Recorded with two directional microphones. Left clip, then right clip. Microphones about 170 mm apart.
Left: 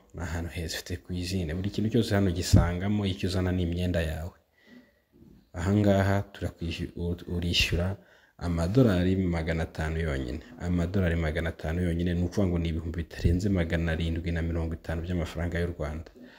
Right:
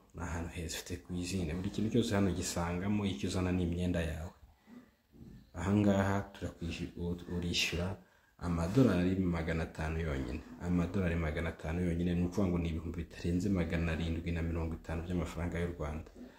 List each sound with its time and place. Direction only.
0.2 s speech: 40° left (ahead or behind)
5.5 s speech: 40° left (ahead or behind)